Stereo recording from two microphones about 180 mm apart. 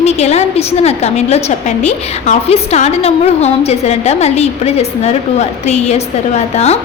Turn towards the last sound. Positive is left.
turn(degrees=35)  # may be behind; listen again after turning